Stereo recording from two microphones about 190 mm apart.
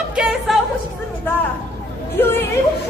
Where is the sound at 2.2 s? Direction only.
10° left (ahead or behind).